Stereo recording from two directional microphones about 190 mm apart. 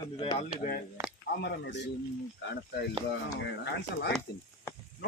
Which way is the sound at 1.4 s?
65° left (ahead or behind).